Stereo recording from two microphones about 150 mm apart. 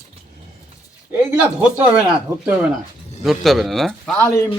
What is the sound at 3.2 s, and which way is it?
Speech, centre (ahead or behind).